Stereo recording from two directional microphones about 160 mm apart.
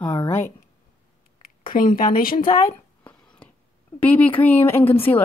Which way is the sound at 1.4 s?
60° left (ahead or behind).